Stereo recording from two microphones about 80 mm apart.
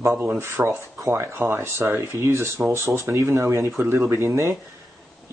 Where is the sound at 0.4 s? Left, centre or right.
Right.